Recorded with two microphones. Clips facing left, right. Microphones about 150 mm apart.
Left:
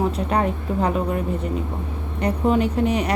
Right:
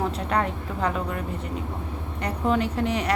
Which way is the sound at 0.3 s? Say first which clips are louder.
Left 4 dB; 20° left (ahead or behind).